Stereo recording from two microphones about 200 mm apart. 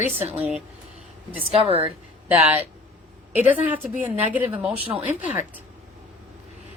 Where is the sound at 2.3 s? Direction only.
10° right (ahead or behind).